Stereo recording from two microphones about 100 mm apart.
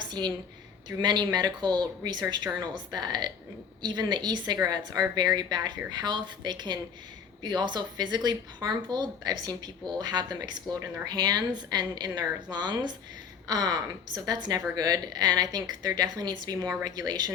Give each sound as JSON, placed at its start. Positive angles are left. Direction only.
{"t": 0.0, "sound": "a woman's voice", "side_deg": -45}